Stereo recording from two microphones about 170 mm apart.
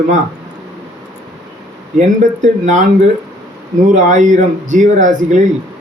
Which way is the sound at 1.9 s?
45° right (ahead or behind).